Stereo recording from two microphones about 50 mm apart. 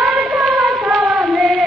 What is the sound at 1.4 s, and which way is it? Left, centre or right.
Music, right.